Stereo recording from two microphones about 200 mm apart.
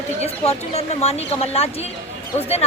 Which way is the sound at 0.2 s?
30° left (ahead or behind).